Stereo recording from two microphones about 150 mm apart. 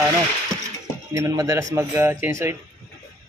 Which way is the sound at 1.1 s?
20° right (ahead or behind).